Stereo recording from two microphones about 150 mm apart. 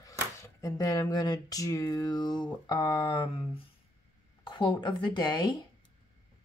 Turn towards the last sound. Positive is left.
turn(degrees=30)  # may be behind; listen again after turning